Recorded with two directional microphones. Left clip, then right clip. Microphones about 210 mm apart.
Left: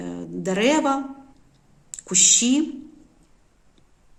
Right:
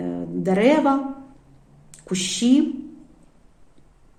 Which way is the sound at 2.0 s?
25° left (ahead or behind).